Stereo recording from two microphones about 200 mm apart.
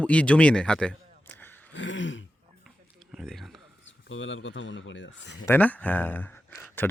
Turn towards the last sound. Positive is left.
turn(degrees=10)  # may be behind; listen again after turning